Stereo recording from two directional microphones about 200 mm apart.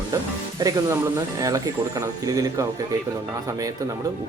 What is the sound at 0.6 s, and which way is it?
Speech, 20° right (ahead or behind).